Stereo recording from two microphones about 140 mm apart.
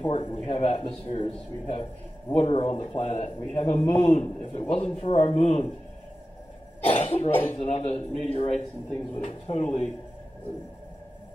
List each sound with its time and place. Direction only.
0.0 s a man's voice: 40° left (ahead or behind)
6.9 s a man's voice: 45° left (ahead or behind)